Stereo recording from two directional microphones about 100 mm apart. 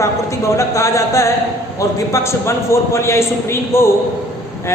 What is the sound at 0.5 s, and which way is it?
A woman's voice, 30° left (ahead or behind).